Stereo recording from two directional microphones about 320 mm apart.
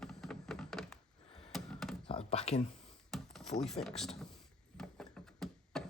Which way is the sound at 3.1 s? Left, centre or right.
Centre.